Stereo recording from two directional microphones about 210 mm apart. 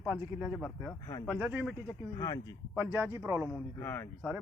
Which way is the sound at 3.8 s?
10° left (ahead or behind).